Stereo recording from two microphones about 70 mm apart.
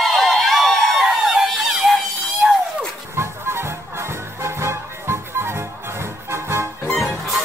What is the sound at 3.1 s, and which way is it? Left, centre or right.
Music, right.